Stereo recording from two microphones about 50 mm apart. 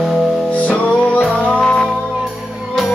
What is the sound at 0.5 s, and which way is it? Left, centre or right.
Music, left.